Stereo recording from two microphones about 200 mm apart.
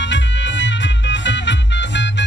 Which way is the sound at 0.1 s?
65° left (ahead or behind).